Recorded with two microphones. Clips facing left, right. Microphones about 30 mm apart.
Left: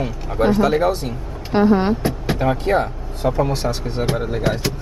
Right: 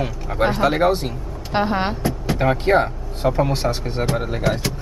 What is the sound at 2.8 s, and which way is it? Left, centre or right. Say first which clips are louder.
Speech: even; centre.